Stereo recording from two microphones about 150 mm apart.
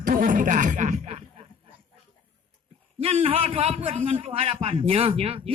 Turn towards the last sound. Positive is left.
turn(degrees=-40)  # may be behind; listen again after turning